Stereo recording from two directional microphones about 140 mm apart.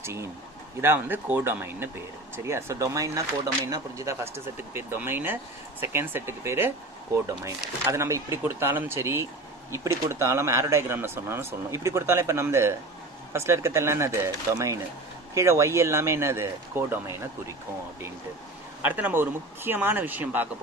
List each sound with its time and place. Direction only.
0.0 s speech: 20° right (ahead or behind)
18.8 s speech: 10° right (ahead or behind)